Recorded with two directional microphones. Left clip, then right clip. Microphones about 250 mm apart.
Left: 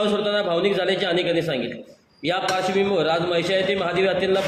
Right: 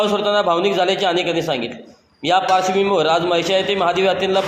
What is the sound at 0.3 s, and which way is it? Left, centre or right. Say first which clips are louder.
A man's voice: right 5 dB; centre.